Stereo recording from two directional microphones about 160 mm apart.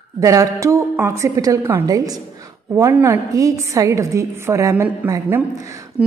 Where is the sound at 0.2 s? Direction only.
20° right (ahead or behind).